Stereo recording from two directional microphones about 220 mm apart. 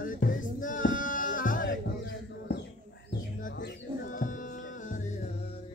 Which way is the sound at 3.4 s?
35° left (ahead or behind).